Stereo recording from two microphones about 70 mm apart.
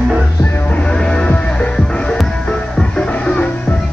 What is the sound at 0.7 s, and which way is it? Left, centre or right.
Music, centre.